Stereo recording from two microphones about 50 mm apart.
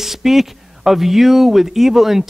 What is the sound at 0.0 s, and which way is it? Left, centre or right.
Speech, centre.